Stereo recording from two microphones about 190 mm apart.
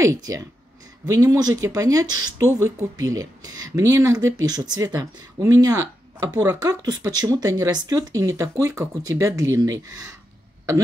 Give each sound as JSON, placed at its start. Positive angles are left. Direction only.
{"t": 0.0, "sound": "speech", "side_deg": -15}